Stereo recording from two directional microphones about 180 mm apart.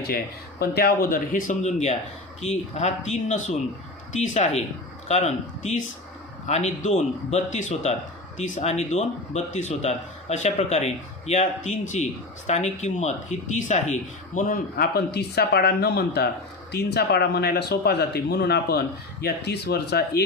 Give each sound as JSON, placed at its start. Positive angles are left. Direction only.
{"t": 0.6, "sound": "a man's voice", "side_deg": 60}